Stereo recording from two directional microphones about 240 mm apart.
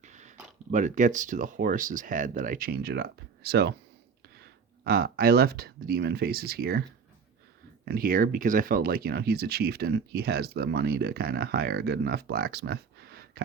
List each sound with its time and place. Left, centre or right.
0.0 s a sound: right
0.7 s speech: right
7.9 s speech: right